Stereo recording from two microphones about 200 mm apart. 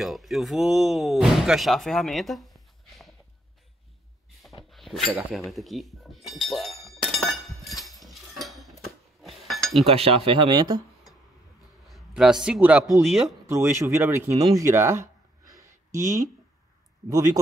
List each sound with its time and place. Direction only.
0.0 s speech: centre (ahead or behind)
4.6 s a sound: centre (ahead or behind)
5.1 s speech: centre (ahead or behind)
7.1 s a sound: centre (ahead or behind)
9.8 s speech: 30° right (ahead or behind)
11.9 s speech: centre (ahead or behind)
13.5 s speech: 15° right (ahead or behind)